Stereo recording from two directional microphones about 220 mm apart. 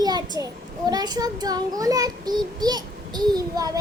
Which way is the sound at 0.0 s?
15° right (ahead or behind).